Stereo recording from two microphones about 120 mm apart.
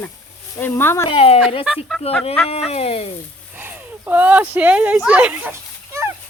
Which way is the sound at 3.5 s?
15° right (ahead or behind).